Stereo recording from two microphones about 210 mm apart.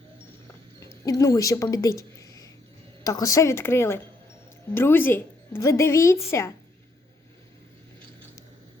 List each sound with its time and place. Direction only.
0.8 s a woman's voice: 15° left (ahead or behind)